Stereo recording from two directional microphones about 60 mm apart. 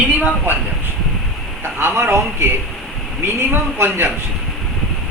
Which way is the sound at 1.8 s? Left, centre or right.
Right.